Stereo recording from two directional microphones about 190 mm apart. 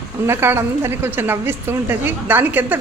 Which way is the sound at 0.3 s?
10° right (ahead or behind).